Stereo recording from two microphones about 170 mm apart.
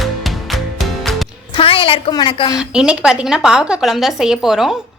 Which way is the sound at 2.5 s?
5° right (ahead or behind).